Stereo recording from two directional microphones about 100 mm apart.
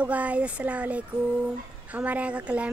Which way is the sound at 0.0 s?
15° right (ahead or behind).